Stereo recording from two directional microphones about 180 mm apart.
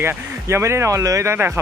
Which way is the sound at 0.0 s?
15° right (ahead or behind).